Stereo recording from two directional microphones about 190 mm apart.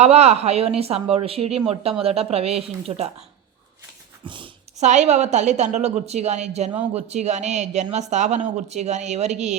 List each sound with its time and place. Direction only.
0.0 s a woman's voice: 35° right (ahead or behind)
4.2 s a sound: 25° right (ahead or behind)
4.9 s a woman's voice: 35° right (ahead or behind)